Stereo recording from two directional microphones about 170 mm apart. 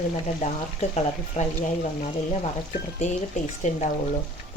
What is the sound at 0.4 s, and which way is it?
Speech, 45° left (ahead or behind).